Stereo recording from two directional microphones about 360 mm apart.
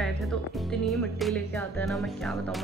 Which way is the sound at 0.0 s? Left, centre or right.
Centre.